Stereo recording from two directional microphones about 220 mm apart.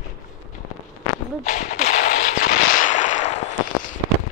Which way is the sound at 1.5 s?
35° left (ahead or behind).